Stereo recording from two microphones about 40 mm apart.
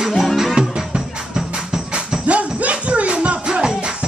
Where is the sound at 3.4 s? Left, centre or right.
Centre.